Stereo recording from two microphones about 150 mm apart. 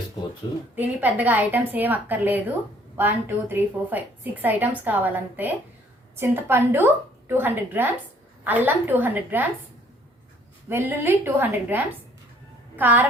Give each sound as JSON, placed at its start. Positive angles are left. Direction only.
{"t": 0.4, "sound": "speech", "side_deg": 25}
{"t": 0.8, "sound": "a woman's voice", "side_deg": -10}
{"t": 10.7, "sound": "a woman's voice", "side_deg": -15}